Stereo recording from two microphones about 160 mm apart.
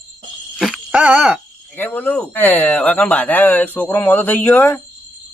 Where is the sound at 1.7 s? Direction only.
10° left (ahead or behind).